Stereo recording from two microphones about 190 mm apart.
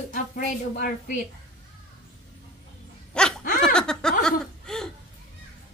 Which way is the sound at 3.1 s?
5° left (ahead or behind).